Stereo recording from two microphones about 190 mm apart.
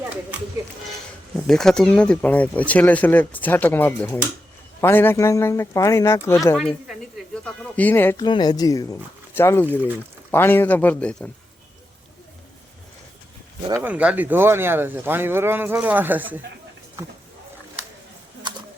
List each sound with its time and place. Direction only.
1.5 s speech: 5° left (ahead or behind)
7.4 s bird: 10° left (ahead or behind)
8.2 s speech: 20° left (ahead or behind); by 11.3 s 5° left (ahead or behind)
13.8 s speech: 5° right (ahead or behind)